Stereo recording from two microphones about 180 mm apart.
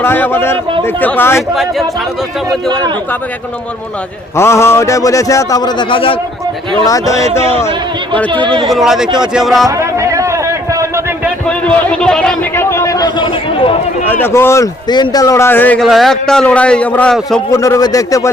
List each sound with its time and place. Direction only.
0.0 s a man's voice: 10° left (ahead or behind)
4.4 s a man's voice: 15° left (ahead or behind)
8.3 s speech: 25° right (ahead or behind)
8.6 s speech: centre (ahead or behind)
9.6 s a sound: 15° right (ahead or behind)
11.4 s a man's voice: 5° left (ahead or behind); by 13.7 s 30° left (ahead or behind)
14.1 s a man's voice: 10° left (ahead or behind)
17.5 s a man's voice: 15° left (ahead or behind)